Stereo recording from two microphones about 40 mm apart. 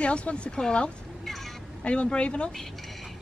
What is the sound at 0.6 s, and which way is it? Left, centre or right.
Speech, centre.